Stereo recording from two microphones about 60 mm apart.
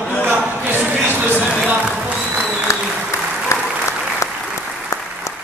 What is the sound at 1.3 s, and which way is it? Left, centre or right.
Speech, centre.